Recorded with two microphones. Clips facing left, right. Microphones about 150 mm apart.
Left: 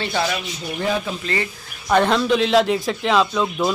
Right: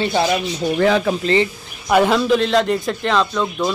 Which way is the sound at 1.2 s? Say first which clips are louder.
Right 8 dB; 25° right (ahead or behind).